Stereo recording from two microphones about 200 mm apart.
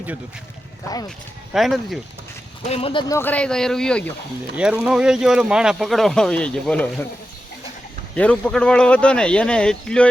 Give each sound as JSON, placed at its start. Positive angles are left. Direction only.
{"t": 1.5, "sound": "speech", "side_deg": 0}
{"t": 2.6, "sound": "speech", "side_deg": 30}
{"t": 3.1, "sound": "speech", "side_deg": 10}
{"t": 8.1, "sound": "speech", "side_deg": 5}